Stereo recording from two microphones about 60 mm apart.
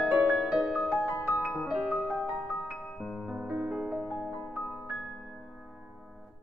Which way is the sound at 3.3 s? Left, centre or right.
Centre.